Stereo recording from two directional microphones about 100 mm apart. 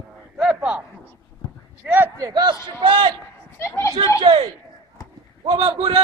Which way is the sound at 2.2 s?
40° right (ahead or behind).